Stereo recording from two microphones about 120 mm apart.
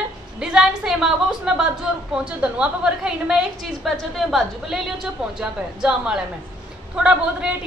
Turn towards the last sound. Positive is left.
turn(degrees=-10)  # may be behind; listen again after turning